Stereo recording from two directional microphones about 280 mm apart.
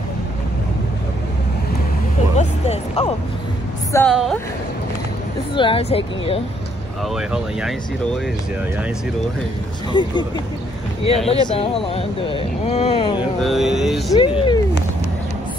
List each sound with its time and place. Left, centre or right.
2.3 s vehicle: left
3.9 s speech: centre
5.5 s speech: centre
7.2 s speech: centre
9.9 s speech: centre
11.2 s speech: left
13.4 s speech: centre
14.1 s speech: centre